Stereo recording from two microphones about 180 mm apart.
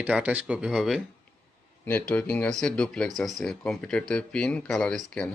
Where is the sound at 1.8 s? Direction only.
10° left (ahead or behind).